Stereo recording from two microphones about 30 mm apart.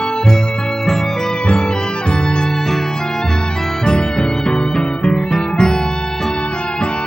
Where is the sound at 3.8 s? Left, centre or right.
Left.